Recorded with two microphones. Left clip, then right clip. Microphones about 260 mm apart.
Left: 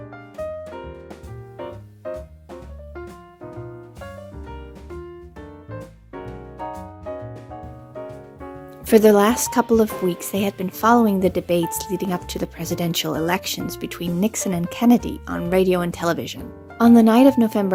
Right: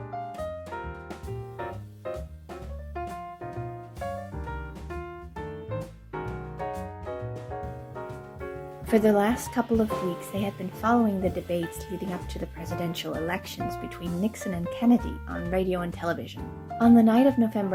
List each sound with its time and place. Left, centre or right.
8.9 s speech: left